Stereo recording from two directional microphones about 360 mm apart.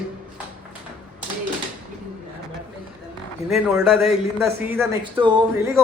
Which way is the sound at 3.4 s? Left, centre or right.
Centre.